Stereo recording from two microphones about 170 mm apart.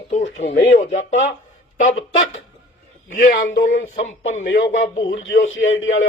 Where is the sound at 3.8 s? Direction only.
40° left (ahead or behind).